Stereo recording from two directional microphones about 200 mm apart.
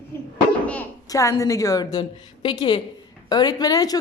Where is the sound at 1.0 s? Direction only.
15° left (ahead or behind).